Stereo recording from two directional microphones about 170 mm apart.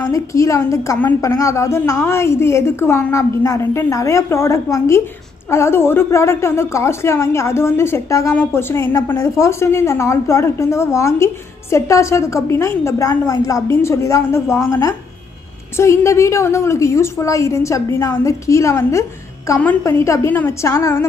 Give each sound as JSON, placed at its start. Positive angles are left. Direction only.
{"t": 0.0, "sound": "a woman's voice", "side_deg": 20}